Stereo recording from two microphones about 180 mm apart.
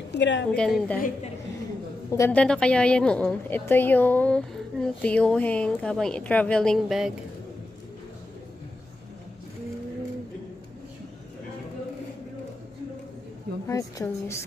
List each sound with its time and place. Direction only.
0.1 s a woman's voice: 80° left
0.5 s a woman's voice: centre (ahead or behind)
0.9 s a woman's voice: 50° left (ahead or behind)
2.0 s a woman's voice: 15° left (ahead or behind)
13.7 s a woman's voice: 20° left (ahead or behind)